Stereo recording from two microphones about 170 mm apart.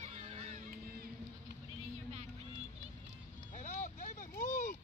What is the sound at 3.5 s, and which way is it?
Vehicle, 45° left (ahead or behind).